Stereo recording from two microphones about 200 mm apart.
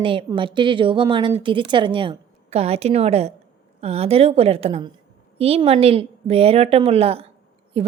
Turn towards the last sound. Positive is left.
turn(degrees=-30)  # may be behind; listen again after turning